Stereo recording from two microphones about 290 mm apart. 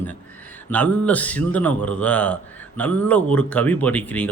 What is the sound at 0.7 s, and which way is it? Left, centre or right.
A man's voice, centre.